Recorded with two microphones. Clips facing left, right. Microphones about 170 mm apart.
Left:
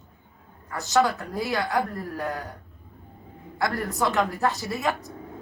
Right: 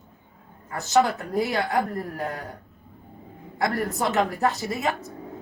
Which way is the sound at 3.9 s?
20° right (ahead or behind).